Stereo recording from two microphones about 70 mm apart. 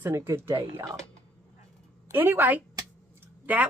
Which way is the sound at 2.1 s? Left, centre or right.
Right.